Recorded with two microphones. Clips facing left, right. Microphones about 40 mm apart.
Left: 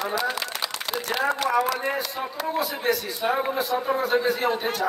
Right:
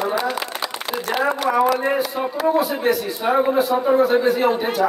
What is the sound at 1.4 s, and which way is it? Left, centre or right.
Speech, centre.